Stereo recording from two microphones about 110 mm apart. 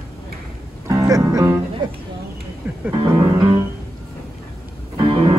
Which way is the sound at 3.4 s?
40° right (ahead or behind).